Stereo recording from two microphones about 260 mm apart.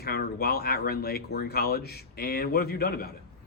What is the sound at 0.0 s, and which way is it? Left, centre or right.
Speech, left.